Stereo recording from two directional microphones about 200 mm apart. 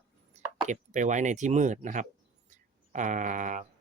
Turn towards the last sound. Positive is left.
turn(degrees=-40)  # may be behind; listen again after turning